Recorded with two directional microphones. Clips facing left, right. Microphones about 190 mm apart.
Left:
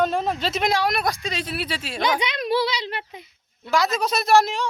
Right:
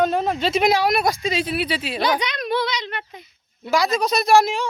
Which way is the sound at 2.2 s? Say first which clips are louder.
Left 1 dB; 25° left (ahead or behind).